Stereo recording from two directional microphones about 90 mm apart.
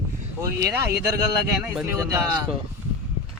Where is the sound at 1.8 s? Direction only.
35° right (ahead or behind).